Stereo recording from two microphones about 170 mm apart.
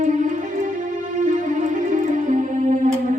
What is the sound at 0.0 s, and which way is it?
Music, 50° right (ahead or behind).